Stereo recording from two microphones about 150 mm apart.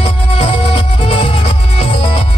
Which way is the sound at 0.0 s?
35° left (ahead or behind).